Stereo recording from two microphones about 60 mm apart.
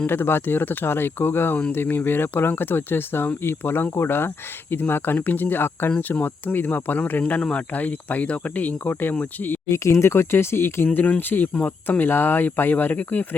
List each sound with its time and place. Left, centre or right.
0.1 s speech: left
9.6 s speech: left
10.9 s speech: left